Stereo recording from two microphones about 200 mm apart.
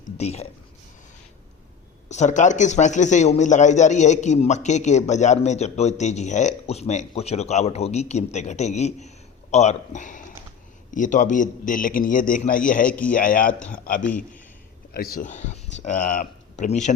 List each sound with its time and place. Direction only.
0.2 s speech: 30° left (ahead or behind)
2.0 s a man's voice: 35° left (ahead or behind)
12.9 s speech: 5° left (ahead or behind)
13.1 s a man's voice: 45° left (ahead or behind)
13.5 s speech: 5° left (ahead or behind)
13.8 s a man's voice: 45° left (ahead or behind)